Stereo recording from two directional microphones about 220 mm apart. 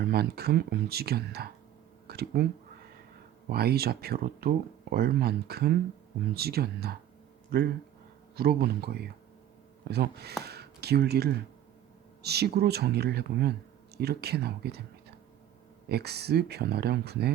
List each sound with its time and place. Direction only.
0.0 s speech: 45° right (ahead or behind)
3.5 s speech: 45° right (ahead or behind)
15.9 s speech: 45° right (ahead or behind)